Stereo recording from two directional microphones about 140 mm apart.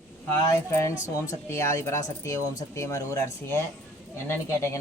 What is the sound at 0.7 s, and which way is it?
A man's voice, 20° left (ahead or behind).